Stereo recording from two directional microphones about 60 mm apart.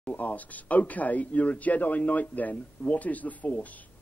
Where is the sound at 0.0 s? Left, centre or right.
Left.